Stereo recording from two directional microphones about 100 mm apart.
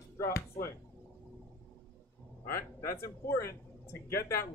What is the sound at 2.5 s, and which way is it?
Speech, 25° left (ahead or behind).